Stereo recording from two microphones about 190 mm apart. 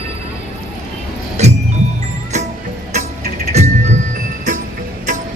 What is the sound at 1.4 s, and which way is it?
Music, 35° right (ahead or behind).